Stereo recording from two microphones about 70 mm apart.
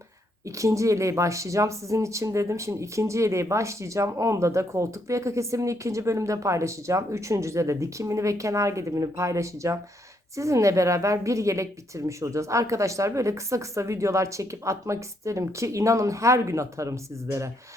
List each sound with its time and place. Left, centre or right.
0.4 s speech: right